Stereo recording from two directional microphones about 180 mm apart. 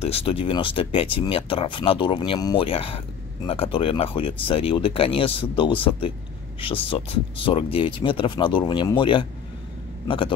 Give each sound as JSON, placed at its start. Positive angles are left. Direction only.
{"t": 0.0, "sound": "speech", "side_deg": 30}